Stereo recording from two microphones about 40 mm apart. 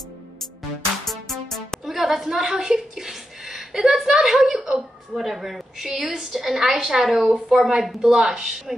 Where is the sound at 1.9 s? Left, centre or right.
Centre.